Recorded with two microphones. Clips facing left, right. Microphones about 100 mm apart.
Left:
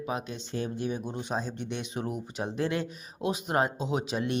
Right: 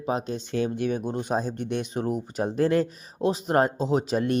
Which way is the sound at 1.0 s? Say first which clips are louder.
Right 6 dB; 50° right (ahead or behind).